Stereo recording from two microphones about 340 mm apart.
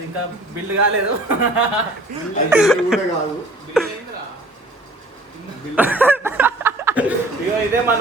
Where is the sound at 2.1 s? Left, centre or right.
Right.